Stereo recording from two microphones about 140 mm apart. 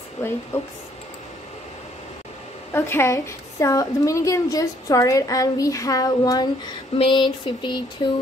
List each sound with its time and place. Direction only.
0.5 s speech: 15° left (ahead or behind)
2.7 s a woman's voice: 15° left (ahead or behind)
7.0 s a sound: 35° left (ahead or behind)